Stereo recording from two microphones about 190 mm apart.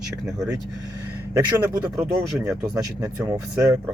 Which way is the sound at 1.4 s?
10° right (ahead or behind).